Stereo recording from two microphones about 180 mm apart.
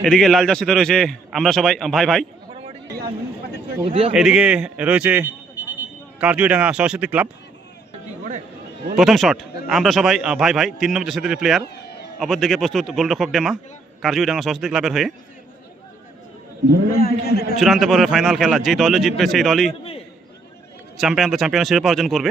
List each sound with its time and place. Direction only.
0.0 s a man's voice: 5° left (ahead or behind)
3.8 s a man's voice: 30° right (ahead or behind)
4.1 s a man's voice: 5° right (ahead or behind)
9.0 s a man's voice: centre (ahead or behind)
17.0 s a man's voice: 60° left (ahead or behind)
17.6 s a man's voice: centre (ahead or behind)
21.0 s a man's voice: centre (ahead or behind)